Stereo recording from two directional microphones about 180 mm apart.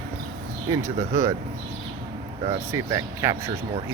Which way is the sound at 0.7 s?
15° right (ahead or behind).